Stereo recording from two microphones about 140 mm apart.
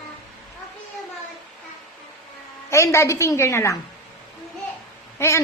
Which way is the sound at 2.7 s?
20° left (ahead or behind).